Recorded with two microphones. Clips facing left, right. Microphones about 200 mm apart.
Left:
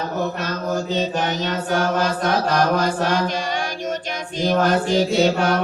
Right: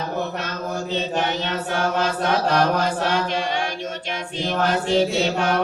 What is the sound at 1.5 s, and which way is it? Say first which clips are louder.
Mantra: left 3 dB; 40° left (ahead or behind).